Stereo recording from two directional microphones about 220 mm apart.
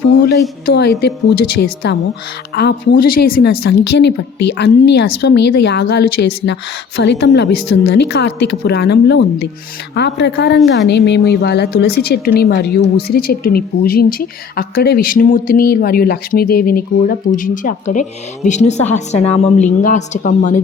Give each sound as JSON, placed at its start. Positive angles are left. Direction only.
{"t": 0.2, "sound": "a woman's voice", "side_deg": 50}